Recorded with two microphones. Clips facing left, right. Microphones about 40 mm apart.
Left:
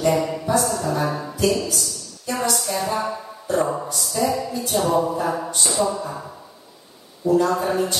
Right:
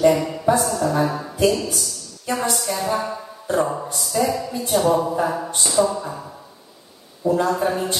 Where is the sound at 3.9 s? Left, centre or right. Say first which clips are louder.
Right 2 dB; right.